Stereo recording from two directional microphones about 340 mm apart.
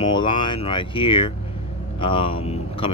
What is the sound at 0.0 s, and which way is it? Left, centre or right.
Speech, centre.